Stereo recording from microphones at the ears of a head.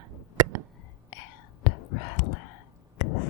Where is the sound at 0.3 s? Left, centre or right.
Right.